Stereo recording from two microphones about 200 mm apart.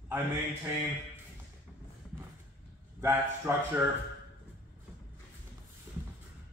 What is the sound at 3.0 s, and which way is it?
Speech, 10° right (ahead or behind).